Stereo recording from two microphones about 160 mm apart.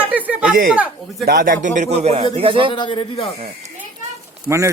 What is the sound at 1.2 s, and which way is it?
A man's voice, 65° right (ahead or behind).